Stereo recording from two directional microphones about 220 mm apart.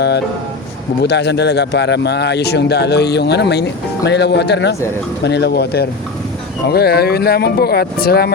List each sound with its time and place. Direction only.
1.0 s speech: 50° left (ahead or behind)